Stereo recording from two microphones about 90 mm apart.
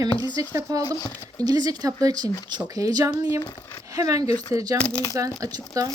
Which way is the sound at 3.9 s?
40° right (ahead or behind).